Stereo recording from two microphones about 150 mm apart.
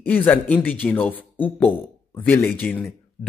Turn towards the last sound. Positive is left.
turn(degrees=5)  # may be behind; listen again after turning